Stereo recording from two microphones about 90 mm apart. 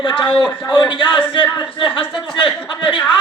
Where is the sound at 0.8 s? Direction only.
60° left (ahead or behind).